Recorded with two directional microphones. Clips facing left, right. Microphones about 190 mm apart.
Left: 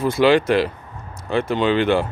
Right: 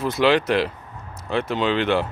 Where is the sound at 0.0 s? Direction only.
Centre (ahead or behind).